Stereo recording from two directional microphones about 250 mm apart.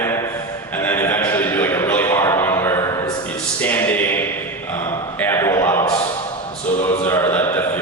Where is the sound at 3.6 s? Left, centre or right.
Centre.